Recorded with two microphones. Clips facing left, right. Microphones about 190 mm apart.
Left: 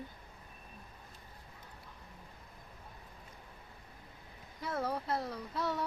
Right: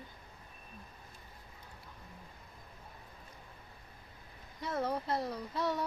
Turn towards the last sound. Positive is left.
turn(degrees=5)  # may be behind; listen again after turning